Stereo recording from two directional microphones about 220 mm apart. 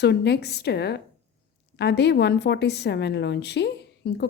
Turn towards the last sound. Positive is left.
turn(degrees=50)  # may be behind; listen again after turning